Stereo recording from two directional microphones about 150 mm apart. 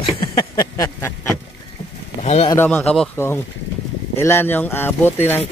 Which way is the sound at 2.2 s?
45° left (ahead or behind).